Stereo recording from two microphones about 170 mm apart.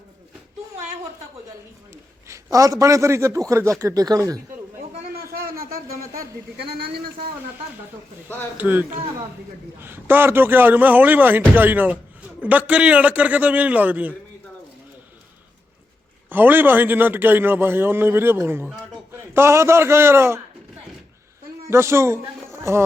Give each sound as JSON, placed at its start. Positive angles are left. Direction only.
{"t": 1.9, "sound": "a man's voice", "side_deg": -15}
{"t": 6.6, "sound": "speech", "side_deg": -65}
{"t": 8.5, "sound": "a man's voice", "side_deg": -10}
{"t": 16.3, "sound": "a man's voice", "side_deg": -10}
{"t": 21.7, "sound": "a man's voice", "side_deg": -15}
{"t": 22.5, "sound": "a sound", "side_deg": -15}